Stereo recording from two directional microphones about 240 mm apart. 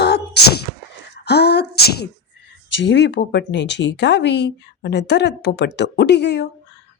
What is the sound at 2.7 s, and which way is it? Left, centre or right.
Speech, left.